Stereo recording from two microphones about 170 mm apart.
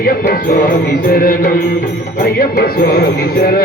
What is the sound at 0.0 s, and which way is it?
Music, 60° left (ahead or behind).